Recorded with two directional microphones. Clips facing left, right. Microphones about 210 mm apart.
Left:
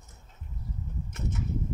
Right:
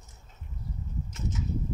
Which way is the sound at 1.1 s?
60° left (ahead or behind).